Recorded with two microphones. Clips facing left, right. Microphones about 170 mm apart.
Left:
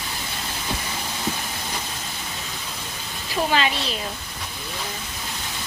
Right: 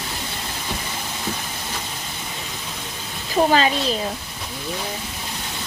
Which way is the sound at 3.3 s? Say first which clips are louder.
Right 5 dB; 40° right (ahead or behind).